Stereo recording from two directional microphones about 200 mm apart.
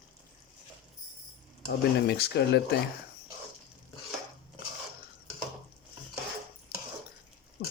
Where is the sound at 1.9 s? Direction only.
55° left (ahead or behind).